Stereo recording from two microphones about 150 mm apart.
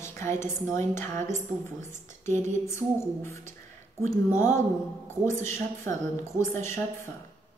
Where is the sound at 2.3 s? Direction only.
55° right (ahead or behind).